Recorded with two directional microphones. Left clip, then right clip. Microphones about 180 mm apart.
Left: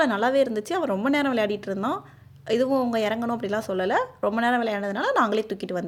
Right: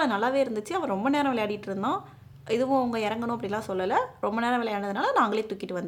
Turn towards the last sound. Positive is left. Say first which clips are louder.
# left 3 dB
turn(degrees=15)  # may be behind; listen again after turning